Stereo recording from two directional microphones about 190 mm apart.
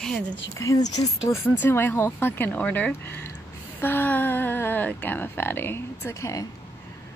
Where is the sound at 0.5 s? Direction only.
15° left (ahead or behind).